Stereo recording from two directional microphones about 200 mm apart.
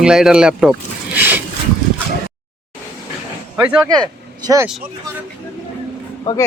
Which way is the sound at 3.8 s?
20° right (ahead or behind).